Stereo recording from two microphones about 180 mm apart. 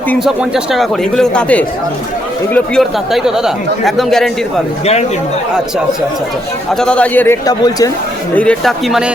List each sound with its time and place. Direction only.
0.3 s speech: 5° right (ahead or behind)
3.1 s speech: centre (ahead or behind)
6.7 s speech: 5° left (ahead or behind)
7.4 s speech: 20° left (ahead or behind)
8.4 s speech: 5° left (ahead or behind)